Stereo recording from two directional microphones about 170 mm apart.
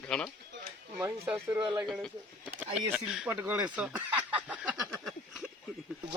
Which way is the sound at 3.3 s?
15° right (ahead or behind).